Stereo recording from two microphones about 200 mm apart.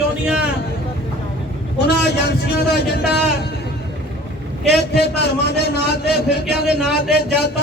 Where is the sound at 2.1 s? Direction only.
55° left (ahead or behind).